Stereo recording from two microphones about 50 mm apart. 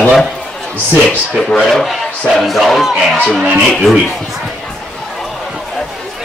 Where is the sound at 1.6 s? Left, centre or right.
Centre.